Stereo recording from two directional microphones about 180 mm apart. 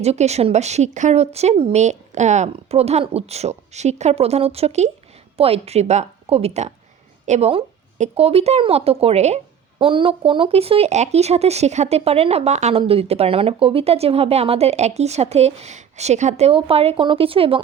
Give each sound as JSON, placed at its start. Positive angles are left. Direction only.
{"t": 0.0, "sound": "speech", "side_deg": -35}